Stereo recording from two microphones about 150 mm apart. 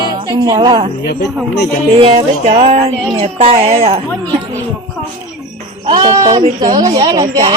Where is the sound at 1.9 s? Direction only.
40° right (ahead or behind).